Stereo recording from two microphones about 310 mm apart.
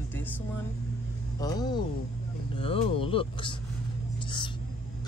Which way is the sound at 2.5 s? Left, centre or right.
Centre.